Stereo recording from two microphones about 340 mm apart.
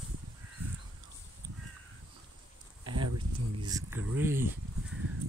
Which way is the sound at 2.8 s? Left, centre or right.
Right.